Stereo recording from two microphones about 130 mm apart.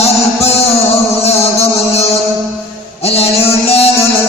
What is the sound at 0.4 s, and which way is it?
Music, 50° left (ahead or behind).